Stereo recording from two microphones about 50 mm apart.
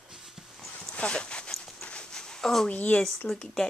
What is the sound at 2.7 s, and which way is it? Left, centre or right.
Speech, left.